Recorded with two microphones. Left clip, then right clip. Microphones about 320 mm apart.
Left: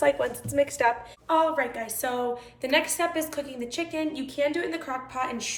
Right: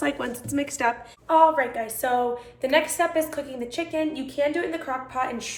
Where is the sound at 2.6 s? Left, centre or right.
Centre.